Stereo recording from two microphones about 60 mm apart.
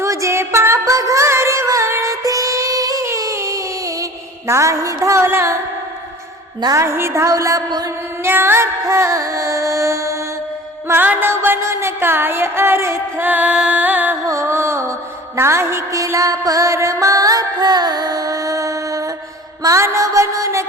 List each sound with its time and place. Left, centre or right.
0.0 s music: right
0.9 s music: right
2.2 s music: right
3.1 s a sound: right
4.4 s a sound: right
6.8 s music: right
8.2 s music: right
8.6 s music: right
11.0 s music: right
11.6 s music: right
13.2 s music: right
14.3 s music: right
19.6 s music: right